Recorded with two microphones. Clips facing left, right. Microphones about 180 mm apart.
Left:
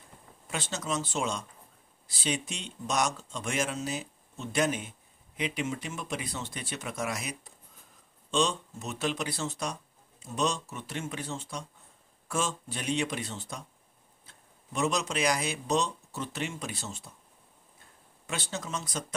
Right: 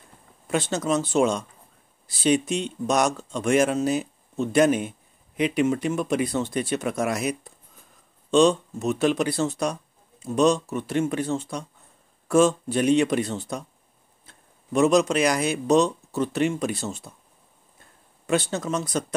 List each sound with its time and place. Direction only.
0.5 s speech: 60° right (ahead or behind)
14.7 s speech: 60° right (ahead or behind)
18.2 s speech: 60° right (ahead or behind)